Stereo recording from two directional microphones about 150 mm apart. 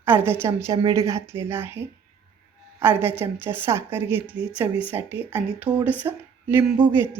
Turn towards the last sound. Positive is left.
turn(degrees=-15)  # may be behind; listen again after turning